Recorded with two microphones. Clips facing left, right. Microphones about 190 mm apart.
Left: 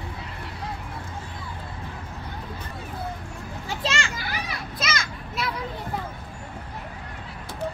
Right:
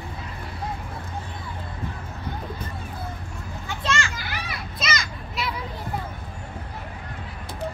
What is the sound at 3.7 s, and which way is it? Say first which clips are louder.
Children playing: right 1 dB; 30° left (ahead or behind).